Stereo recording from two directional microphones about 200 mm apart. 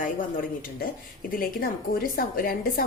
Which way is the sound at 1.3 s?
45° left (ahead or behind).